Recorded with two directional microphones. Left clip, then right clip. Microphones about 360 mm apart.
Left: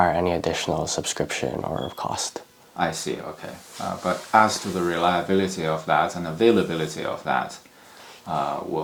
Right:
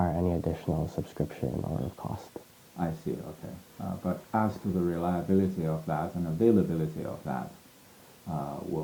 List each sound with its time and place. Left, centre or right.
0.0 s speech: centre